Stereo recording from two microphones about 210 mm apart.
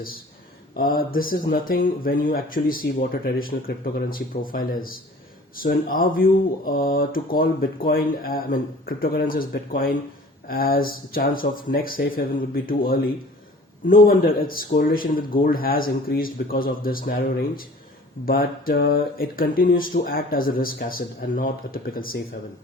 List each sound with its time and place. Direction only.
0.8 s speech: 45° left (ahead or behind)